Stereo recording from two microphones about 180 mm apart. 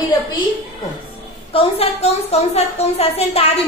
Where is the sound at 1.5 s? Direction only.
30° left (ahead or behind).